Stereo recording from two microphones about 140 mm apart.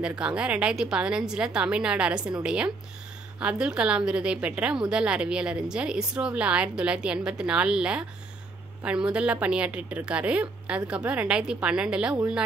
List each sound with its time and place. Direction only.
0.0 s a woman's voice: 5° right (ahead or behind)